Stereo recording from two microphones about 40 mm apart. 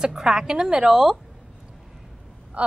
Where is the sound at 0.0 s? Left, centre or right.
Centre.